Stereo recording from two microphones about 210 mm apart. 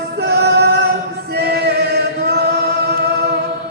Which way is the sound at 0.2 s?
50° right (ahead or behind).